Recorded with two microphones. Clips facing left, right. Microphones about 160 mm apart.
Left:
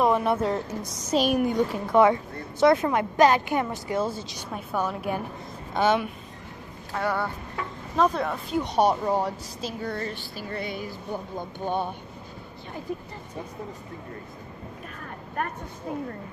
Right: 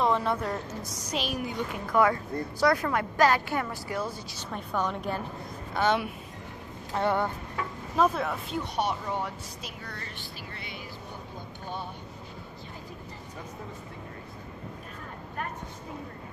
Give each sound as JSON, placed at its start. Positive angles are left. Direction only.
{"t": 0.0, "sound": "a woman's voice", "side_deg": 20}
{"t": 1.1, "sound": "a woman's voice", "side_deg": 50}
{"t": 1.7, "sound": "speech", "side_deg": 25}
{"t": 4.4, "sound": "a woman's voice", "side_deg": 10}
{"t": 5.8, "sound": "speech", "side_deg": 20}
{"t": 6.9, "sound": "speech", "side_deg": -20}
{"t": 7.9, "sound": "speech", "side_deg": -5}
{"t": 8.7, "sound": "speech", "side_deg": 40}
{"t": 11.3, "sound": "speech", "side_deg": 55}
{"t": 15.4, "sound": "a woman's voice", "side_deg": 55}